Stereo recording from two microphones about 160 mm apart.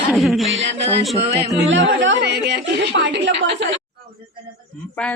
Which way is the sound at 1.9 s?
90° right.